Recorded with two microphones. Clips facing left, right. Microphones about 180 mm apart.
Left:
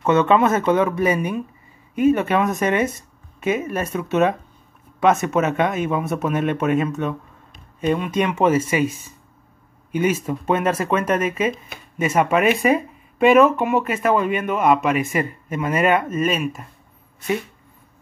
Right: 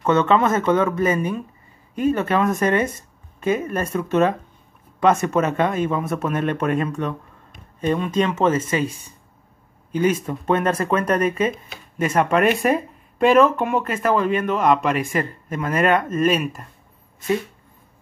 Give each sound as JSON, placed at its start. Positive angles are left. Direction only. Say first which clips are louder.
{"t": 0.0, "sound": "speech", "louder": "left 1 dB", "side_deg": 10}